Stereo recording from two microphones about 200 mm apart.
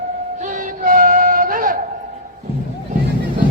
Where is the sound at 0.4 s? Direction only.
45° right (ahead or behind).